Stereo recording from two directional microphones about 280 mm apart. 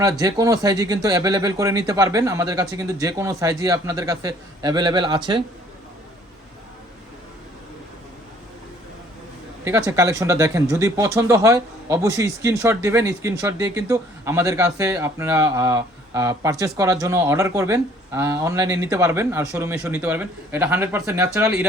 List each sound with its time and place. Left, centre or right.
0.0 s speech: centre
9.6 s speech: centre